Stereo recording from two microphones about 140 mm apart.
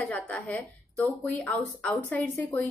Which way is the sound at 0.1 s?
10° left (ahead or behind).